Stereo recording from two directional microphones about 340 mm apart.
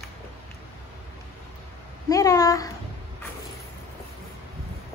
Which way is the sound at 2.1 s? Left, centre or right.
Centre.